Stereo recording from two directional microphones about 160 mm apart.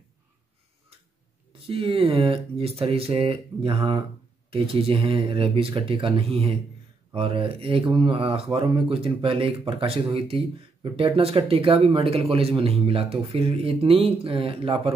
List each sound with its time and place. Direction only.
1.7 s speech: 35° right (ahead or behind)